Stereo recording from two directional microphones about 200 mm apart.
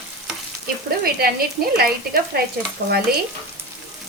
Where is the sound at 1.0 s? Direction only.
50° right (ahead or behind).